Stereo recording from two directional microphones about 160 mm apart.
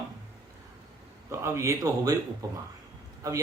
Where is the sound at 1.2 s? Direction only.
15° right (ahead or behind).